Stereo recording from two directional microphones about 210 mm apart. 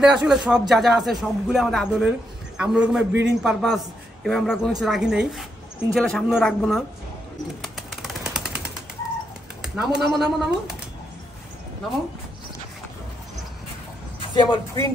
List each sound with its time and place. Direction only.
0.0 s a man's voice: 5° right (ahead or behind)
7.6 s bird: centre (ahead or behind)
9.8 s a man's voice: centre (ahead or behind)
14.3 s speech: 20° left (ahead or behind)